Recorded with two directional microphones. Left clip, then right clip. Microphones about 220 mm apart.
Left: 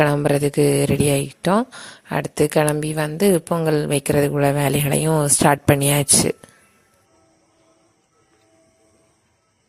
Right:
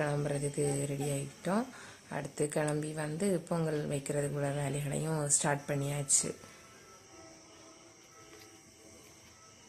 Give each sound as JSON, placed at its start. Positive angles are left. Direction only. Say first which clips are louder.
{"t": 0.0, "sound": "a woman's voice", "louder": "left 17 dB", "side_deg": 40}